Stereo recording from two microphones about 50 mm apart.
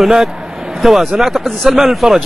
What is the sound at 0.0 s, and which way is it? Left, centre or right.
A man's voice, centre.